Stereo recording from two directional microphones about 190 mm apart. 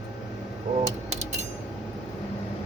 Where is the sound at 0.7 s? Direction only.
45° right (ahead or behind).